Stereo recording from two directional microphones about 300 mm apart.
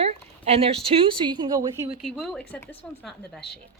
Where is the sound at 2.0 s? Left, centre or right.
Centre.